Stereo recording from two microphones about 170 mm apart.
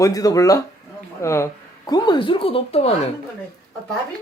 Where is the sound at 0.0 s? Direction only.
20° left (ahead or behind).